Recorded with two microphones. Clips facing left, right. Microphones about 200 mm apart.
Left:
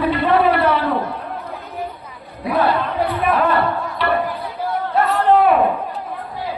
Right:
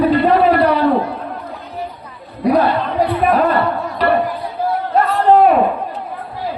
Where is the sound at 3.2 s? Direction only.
45° right (ahead or behind).